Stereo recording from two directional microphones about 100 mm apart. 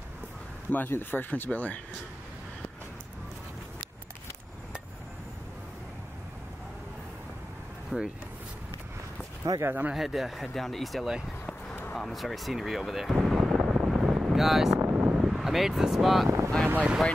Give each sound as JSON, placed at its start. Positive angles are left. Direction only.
{"t": 0.7, "sound": "speech", "side_deg": 20}
{"t": 7.9, "sound": "speech", "side_deg": 0}
{"t": 9.4, "sound": "speech", "side_deg": -35}
{"t": 9.7, "sound": "speech", "side_deg": -20}
{"t": 9.9, "sound": "speech", "side_deg": 0}
{"t": 13.8, "sound": "wind noise", "side_deg": -5}
{"t": 14.8, "sound": "speech", "side_deg": -15}
{"t": 16.3, "sound": "speech", "side_deg": -25}
{"t": 16.6, "sound": "speech", "side_deg": -15}